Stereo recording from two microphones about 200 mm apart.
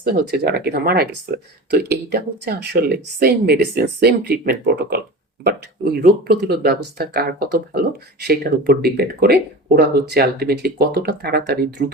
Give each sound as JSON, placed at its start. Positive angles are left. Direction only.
{"t": 0.0, "sound": "speech", "side_deg": -50}